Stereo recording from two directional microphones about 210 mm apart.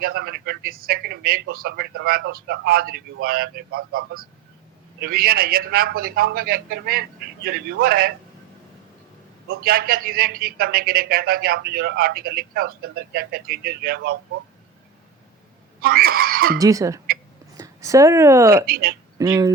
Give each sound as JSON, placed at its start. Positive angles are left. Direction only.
{"t": 0.0, "sound": "a man's voice", "side_deg": -45}
{"t": 9.5, "sound": "a man's voice", "side_deg": -45}
{"t": 15.8, "sound": "a man's voice", "side_deg": -45}
{"t": 16.6, "sound": "speech", "side_deg": -15}
{"t": 18.5, "sound": "a man's voice", "side_deg": -45}
{"t": 19.2, "sound": "speech", "side_deg": -20}